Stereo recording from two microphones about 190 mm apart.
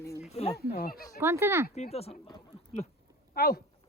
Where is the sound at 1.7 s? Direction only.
35° left (ahead or behind).